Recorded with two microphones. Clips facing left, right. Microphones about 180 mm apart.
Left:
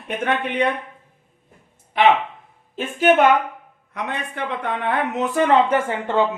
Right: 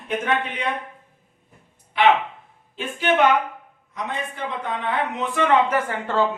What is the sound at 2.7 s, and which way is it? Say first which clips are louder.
Speech: left 5 dB; 45° left (ahead or behind).